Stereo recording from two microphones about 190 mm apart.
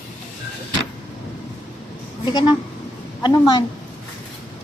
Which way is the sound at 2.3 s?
25° left (ahead or behind).